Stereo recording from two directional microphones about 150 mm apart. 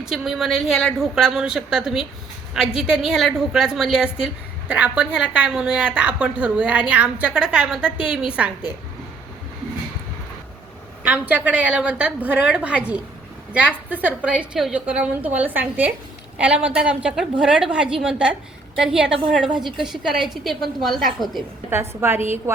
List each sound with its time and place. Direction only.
0.0 s a woman's voice: centre (ahead or behind)
11.0 s a woman's voice: 10° right (ahead or behind)
21.7 s a woman's voice: 15° right (ahead or behind)